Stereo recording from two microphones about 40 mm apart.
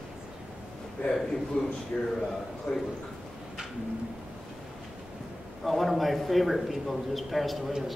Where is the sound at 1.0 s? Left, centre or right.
Left.